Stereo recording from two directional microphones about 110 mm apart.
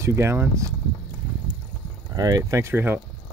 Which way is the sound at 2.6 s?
20° right (ahead or behind).